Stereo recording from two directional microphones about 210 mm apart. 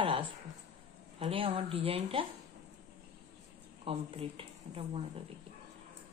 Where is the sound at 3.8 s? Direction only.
25° right (ahead or behind).